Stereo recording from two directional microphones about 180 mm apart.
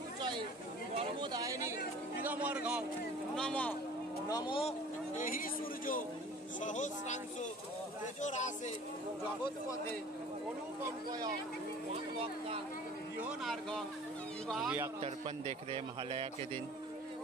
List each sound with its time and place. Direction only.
0.9 s a sound: 25° right (ahead or behind)
2.2 s speech: 10° right (ahead or behind)
3.3 s a man's voice: 5° left (ahead or behind)
4.3 s speech: 25° left (ahead or behind)
5.1 s a man's voice: 50° left (ahead or behind)
8.2 s a man's voice: 40° left (ahead or behind)
13.2 s a man's voice: centre (ahead or behind)
15.0 s a man's voice: 35° right (ahead or behind)